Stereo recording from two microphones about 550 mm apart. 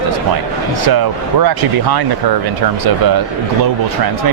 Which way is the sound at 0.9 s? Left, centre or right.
Right.